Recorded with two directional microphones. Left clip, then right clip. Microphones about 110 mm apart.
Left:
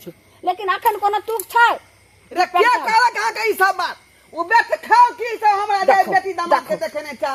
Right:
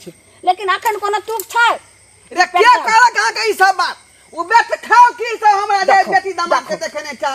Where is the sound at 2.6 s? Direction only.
20° right (ahead or behind).